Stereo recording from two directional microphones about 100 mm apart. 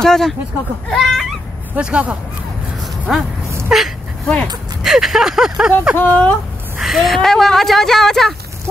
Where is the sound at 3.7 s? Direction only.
5° right (ahead or behind).